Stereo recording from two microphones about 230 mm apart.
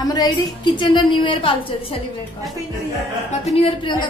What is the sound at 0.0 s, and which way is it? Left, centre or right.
A woman's voice, centre.